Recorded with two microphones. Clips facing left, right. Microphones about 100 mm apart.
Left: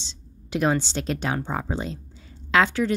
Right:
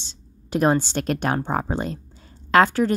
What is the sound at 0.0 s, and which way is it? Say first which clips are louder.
A woman's voice: left 1 dB; 45° right (ahead or behind).